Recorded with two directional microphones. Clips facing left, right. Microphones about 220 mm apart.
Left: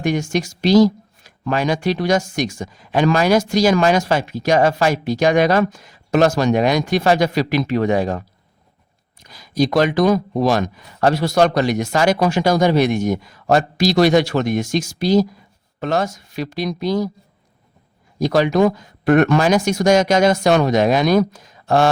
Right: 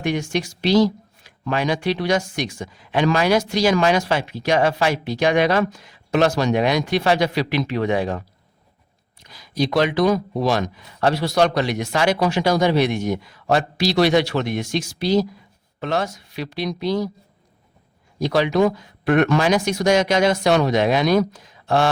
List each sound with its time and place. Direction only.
0.0 s speech: 45° left (ahead or behind)
9.2 s speech: 45° left (ahead or behind)
18.2 s speech: 45° left (ahead or behind)